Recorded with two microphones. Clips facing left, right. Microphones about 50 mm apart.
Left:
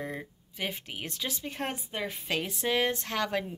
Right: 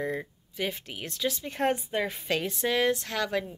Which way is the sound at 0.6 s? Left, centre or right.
Centre.